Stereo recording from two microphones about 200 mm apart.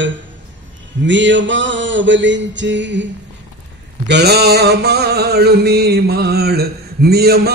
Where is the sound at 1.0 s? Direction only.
65° right (ahead or behind).